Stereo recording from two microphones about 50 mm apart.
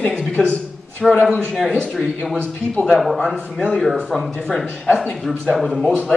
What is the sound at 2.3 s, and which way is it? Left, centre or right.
Speech, left.